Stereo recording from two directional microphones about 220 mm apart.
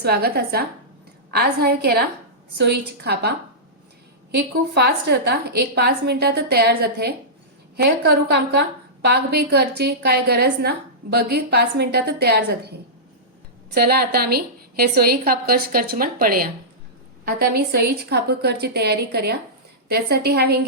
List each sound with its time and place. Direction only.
0.0 s a woman's voice: 45° right (ahead or behind)
13.7 s a woman's voice: 45° right (ahead or behind)